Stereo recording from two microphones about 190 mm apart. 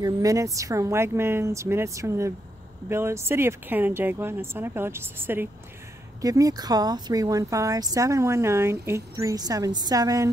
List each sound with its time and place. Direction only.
0.0 s speech: 15° right (ahead or behind)